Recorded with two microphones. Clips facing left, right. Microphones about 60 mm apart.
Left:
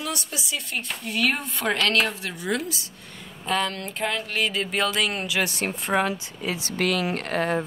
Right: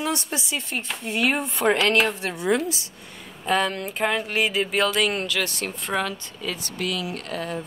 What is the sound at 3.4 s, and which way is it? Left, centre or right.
Speech, centre.